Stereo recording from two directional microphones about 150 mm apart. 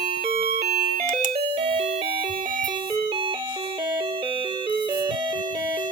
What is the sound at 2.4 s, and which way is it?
Music, 65° right (ahead or behind).